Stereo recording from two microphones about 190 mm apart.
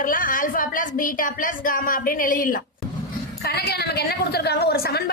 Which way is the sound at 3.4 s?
55° left (ahead or behind).